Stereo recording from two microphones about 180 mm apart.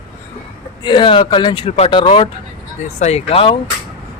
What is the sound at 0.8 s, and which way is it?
Speech, 25° left (ahead or behind).